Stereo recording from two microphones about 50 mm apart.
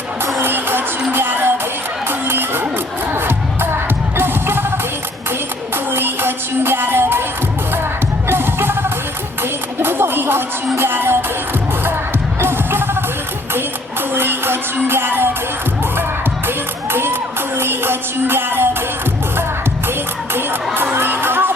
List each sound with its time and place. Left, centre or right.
0.3 s music: right
5.7 s music: right
8.3 s music: right
12.4 s music: right
14.1 s music: right
16.9 s crowd: right
17.6 s music: right
20.3 s music: right